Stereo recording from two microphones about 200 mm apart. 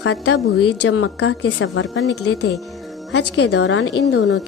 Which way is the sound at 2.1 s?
90° left.